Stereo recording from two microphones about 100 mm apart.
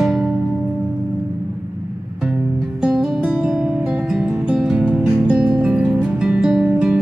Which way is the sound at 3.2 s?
15° right (ahead or behind).